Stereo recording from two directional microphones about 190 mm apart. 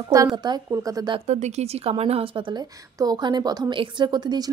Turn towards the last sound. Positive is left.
turn(degrees=-20)  # may be behind; listen again after turning